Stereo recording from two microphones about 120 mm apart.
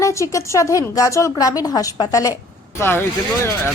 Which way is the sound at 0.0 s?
25° left (ahead or behind).